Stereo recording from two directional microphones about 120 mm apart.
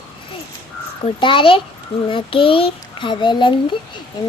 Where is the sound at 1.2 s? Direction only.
45° left (ahead or behind).